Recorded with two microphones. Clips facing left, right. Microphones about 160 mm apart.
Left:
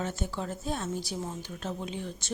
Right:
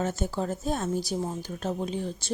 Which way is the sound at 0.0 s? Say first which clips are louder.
Right 5 dB; 40° right (ahead or behind).